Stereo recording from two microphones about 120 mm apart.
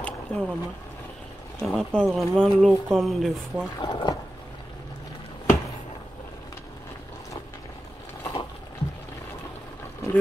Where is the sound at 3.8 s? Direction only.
40° left (ahead or behind).